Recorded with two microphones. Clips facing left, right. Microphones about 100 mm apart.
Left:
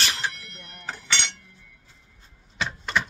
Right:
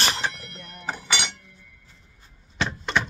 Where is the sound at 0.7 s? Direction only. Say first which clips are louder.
Right 2 dB; 15° right (ahead or behind).